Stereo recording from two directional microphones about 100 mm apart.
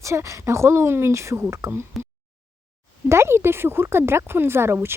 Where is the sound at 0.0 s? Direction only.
30° right (ahead or behind).